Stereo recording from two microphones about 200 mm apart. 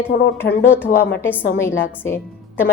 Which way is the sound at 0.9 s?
45° left (ahead or behind).